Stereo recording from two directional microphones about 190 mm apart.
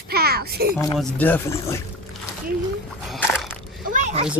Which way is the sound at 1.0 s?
10° left (ahead or behind).